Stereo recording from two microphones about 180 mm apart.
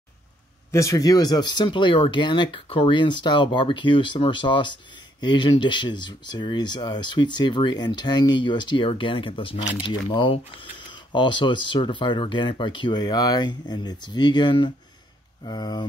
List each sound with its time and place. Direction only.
0.7 s speech: 15° left (ahead or behind)